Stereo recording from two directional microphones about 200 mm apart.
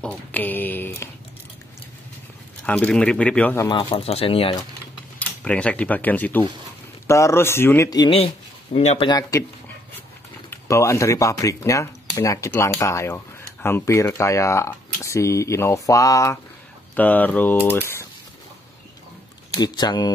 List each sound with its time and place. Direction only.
0.0 s speech: 5° left (ahead or behind)
2.6 s speech: 10° left (ahead or behind)
3.9 s speech: 30° left (ahead or behind)
5.4 s speech: 5° left (ahead or behind); by 9.1 s 30° left (ahead or behind)
9.3 s speech: 15° left (ahead or behind)
10.5 s speech: 15° left (ahead or behind)
19.6 s speech: 20° left (ahead or behind)